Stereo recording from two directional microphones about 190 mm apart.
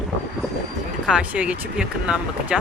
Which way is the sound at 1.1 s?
5° right (ahead or behind).